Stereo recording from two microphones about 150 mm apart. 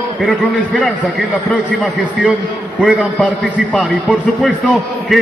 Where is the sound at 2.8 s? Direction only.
10° right (ahead or behind).